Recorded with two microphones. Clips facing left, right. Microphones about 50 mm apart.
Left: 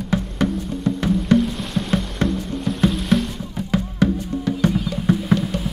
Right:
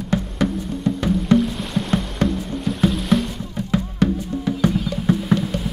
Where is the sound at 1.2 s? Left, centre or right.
Centre.